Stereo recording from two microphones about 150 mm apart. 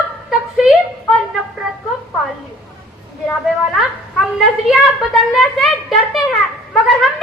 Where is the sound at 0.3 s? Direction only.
Centre (ahead or behind).